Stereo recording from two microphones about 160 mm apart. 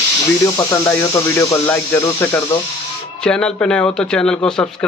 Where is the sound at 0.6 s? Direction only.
20° left (ahead or behind).